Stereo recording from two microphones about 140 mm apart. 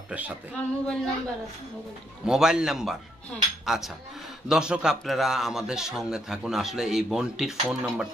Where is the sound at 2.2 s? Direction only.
5° right (ahead or behind).